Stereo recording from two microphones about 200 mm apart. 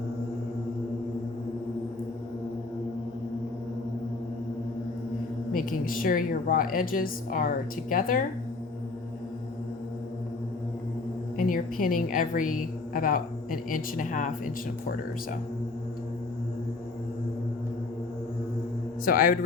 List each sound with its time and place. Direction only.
5.5 s a woman's voice: 45° left (ahead or behind)
11.3 s a woman's voice: 45° left (ahead or behind)
19.0 s a woman's voice: 45° left (ahead or behind)